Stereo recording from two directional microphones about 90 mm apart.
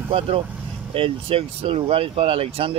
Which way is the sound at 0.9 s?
90° right.